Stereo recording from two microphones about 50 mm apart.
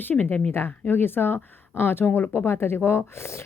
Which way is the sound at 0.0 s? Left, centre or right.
Left.